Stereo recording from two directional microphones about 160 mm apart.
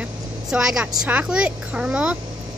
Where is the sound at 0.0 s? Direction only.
5° right (ahead or behind).